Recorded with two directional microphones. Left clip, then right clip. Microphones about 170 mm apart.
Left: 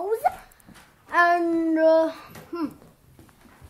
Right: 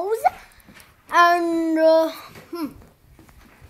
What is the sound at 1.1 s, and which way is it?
Babbling, 20° right (ahead or behind).